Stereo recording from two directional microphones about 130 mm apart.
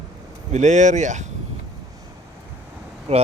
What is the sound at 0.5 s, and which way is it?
Speech, 65° right (ahead or behind).